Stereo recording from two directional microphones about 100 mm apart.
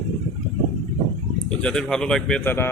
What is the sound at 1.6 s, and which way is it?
Speech, 10° left (ahead or behind).